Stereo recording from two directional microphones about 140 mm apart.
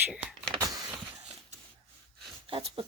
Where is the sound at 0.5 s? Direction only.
25° right (ahead or behind).